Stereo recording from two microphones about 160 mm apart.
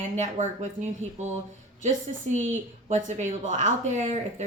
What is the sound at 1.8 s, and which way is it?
Speech, 45° right (ahead or behind).